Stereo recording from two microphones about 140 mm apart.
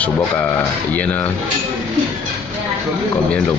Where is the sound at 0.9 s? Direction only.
10° left (ahead or behind).